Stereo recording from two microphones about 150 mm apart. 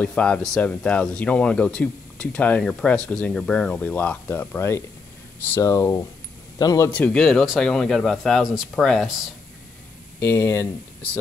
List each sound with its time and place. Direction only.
0.0 s speech: 5° left (ahead or behind); by 6.9 s 25° left (ahead or behind)
6.9 s speech: 10° left (ahead or behind)
10.2 s speech: 15° left (ahead or behind)